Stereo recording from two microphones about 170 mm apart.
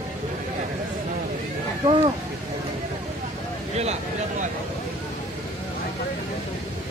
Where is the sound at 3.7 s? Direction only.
40° right (ahead or behind).